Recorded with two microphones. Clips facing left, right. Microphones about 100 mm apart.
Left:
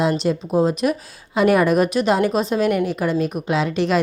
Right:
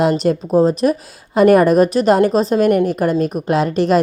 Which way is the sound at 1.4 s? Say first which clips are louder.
Right 5 dB; 45° right (ahead or behind).